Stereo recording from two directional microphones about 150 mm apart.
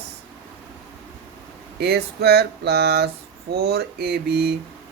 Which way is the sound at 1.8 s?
90° right.